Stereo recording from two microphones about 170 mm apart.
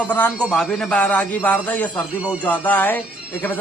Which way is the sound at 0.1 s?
10° left (ahead or behind).